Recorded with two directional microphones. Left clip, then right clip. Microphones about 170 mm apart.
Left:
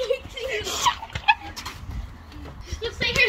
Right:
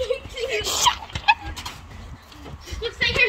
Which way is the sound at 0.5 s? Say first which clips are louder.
Right 3 dB; 25° right (ahead or behind).